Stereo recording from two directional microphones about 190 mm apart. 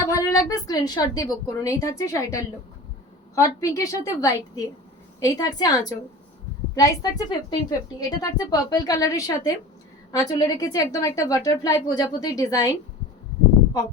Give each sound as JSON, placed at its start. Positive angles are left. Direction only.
{"t": 0.1, "sound": "a woman's voice", "side_deg": 20}